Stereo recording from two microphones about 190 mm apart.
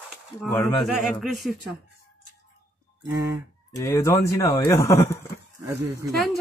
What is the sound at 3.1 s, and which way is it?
Fowl, 15° right (ahead or behind).